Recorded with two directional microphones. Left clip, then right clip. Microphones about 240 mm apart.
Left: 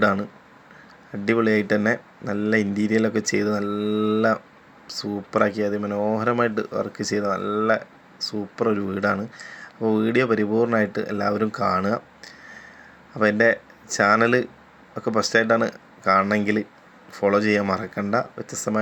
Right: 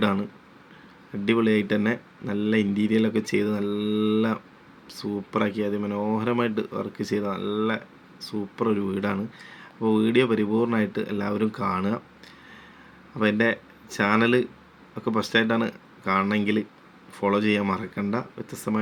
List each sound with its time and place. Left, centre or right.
0.0 s speech: centre
3.6 s speech: left
4.9 s speech: centre
8.5 s speech: centre